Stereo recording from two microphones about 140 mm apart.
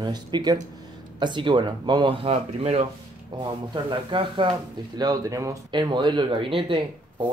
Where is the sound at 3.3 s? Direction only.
35° right (ahead or behind).